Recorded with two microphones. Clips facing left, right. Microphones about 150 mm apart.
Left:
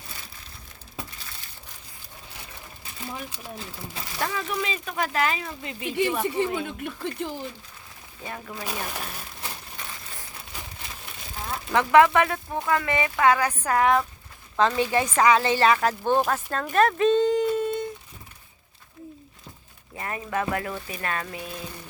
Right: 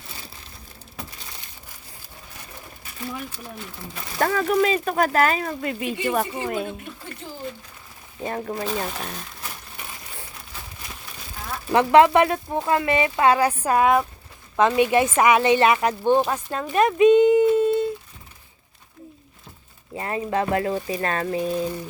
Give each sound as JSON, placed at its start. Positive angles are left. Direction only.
{"t": 4.2, "sound": "speech", "side_deg": -50}
{"t": 7.0, "sound": "speech", "side_deg": 70}
{"t": 8.2, "sound": "speech", "side_deg": -45}
{"t": 11.7, "sound": "a woman's voice", "side_deg": -20}
{"t": 20.0, "sound": "speech", "side_deg": -25}